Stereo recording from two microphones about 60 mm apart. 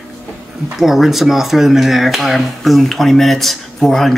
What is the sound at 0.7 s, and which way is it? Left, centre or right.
Speech, centre.